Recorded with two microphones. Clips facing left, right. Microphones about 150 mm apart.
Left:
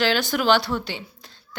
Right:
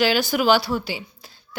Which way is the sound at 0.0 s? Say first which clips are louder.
Right 2 dB; 5° right (ahead or behind).